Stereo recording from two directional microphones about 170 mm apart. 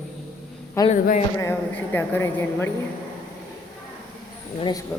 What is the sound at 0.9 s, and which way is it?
Speech, 45° left (ahead or behind).